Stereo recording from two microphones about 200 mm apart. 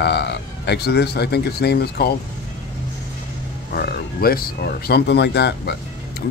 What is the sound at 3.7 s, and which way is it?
Speech, 50° left (ahead or behind).